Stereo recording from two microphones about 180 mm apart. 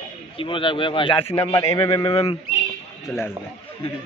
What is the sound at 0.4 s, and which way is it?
Speech, 25° left (ahead or behind).